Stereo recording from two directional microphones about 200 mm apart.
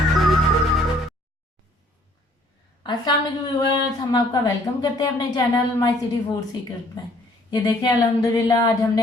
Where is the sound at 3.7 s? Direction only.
20° left (ahead or behind).